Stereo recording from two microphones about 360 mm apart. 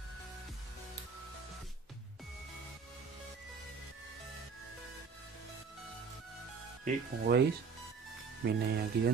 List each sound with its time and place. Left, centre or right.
6.8 s speech: right
8.5 s speech: right